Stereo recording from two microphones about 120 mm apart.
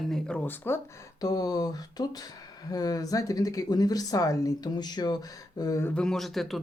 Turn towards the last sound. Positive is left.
turn(degrees=0)  # may be behind; listen again after turning